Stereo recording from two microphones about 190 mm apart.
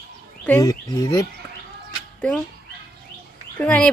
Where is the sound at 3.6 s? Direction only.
10° left (ahead or behind).